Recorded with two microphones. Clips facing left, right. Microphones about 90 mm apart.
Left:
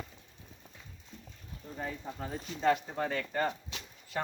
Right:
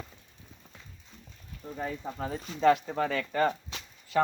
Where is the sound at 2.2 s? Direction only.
90° right.